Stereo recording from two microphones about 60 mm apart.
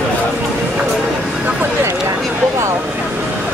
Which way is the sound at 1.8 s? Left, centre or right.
Right.